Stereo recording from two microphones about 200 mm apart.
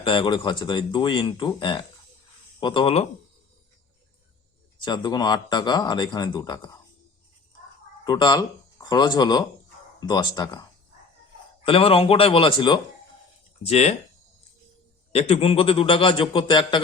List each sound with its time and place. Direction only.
0.0 s speech: 25° left (ahead or behind)
4.8 s speech: 20° left (ahead or behind)
8.0 s speech: 20° left (ahead or behind)
15.1 s speech: 30° left (ahead or behind)